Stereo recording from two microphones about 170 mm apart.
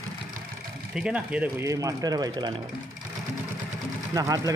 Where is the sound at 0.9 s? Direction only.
5° right (ahead or behind).